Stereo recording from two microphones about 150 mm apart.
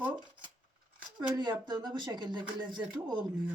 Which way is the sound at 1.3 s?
30° right (ahead or behind).